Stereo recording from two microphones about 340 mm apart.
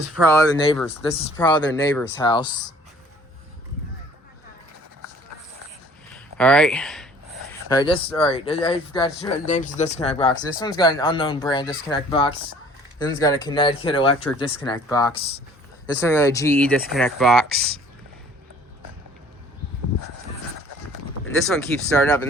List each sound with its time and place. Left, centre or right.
0.3 s speech: centre
6.1 s speech: centre
7.7 s speech: centre
9.5 s speech: left; by 17.4 s centre
21.4 s speech: centre